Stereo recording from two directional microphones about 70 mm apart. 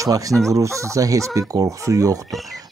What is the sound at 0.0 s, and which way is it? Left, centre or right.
Speech, right.